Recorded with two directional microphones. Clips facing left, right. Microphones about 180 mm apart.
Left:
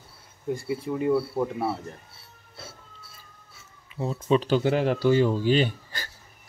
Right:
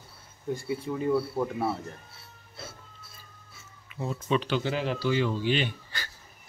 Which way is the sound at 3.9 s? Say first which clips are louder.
Left 5 dB; 35° left (ahead or behind).